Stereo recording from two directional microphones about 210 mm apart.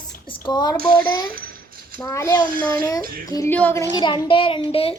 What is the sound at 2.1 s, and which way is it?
A child's voice, 10° left (ahead or behind).